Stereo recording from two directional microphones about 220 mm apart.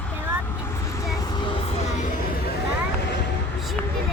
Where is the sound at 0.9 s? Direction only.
15° left (ahead or behind); by 2.5 s 40° left (ahead or behind).